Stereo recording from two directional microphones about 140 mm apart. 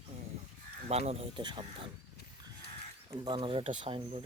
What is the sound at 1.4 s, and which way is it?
Speech, 35° right (ahead or behind).